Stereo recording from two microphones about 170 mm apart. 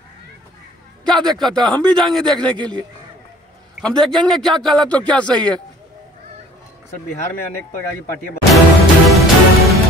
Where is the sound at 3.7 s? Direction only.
Centre (ahead or behind).